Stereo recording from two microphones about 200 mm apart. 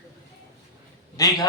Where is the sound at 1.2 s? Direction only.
20° left (ahead or behind).